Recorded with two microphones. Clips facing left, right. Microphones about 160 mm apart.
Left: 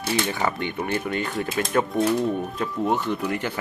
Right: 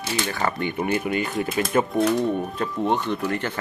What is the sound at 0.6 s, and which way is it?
Speech, 5° right (ahead or behind).